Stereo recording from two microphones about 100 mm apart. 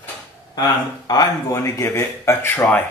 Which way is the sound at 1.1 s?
35° left (ahead or behind).